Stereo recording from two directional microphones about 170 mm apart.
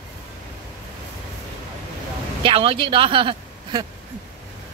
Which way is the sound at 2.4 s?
30° right (ahead or behind).